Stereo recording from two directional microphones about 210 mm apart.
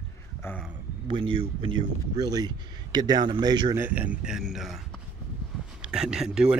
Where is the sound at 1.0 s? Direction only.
25° right (ahead or behind).